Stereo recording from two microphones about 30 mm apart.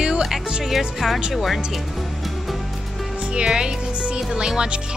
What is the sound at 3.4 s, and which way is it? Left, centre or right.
Speech, right.